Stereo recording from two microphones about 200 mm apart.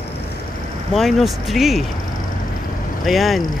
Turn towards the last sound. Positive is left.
turn(degrees=0)  # may be behind; listen again after turning